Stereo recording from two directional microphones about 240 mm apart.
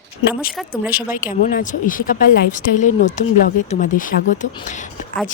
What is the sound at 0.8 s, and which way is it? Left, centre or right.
Speech, centre.